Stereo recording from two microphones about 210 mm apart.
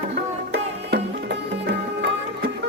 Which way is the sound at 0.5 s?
50° right (ahead or behind).